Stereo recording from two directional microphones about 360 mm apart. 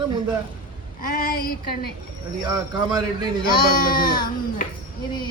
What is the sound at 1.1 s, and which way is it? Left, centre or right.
Child singing, left.